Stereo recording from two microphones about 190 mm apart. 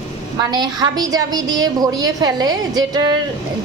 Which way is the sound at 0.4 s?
20° right (ahead or behind).